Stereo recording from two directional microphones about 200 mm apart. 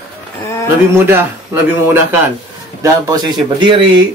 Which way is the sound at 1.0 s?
10° right (ahead or behind).